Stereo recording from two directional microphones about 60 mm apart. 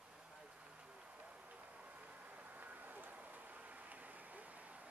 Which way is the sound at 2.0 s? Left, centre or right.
Right.